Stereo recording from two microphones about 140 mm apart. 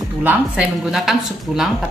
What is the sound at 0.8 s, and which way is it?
Speech, 5° right (ahead or behind).